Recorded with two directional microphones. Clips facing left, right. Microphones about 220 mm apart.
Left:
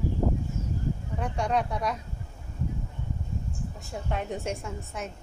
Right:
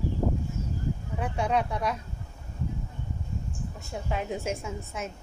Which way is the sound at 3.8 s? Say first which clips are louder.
Right 1 dB; centre (ahead or behind).